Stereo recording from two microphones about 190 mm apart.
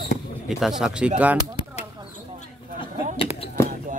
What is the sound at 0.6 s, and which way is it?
Speech, centre (ahead or behind).